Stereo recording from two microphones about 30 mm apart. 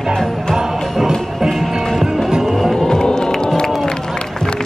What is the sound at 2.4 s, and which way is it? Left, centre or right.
Vehicle, centre.